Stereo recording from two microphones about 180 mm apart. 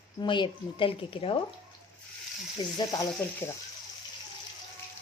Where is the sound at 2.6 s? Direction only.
25° left (ahead or behind).